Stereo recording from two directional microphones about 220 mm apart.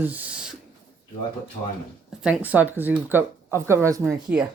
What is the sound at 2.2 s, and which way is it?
Speech, 5° right (ahead or behind).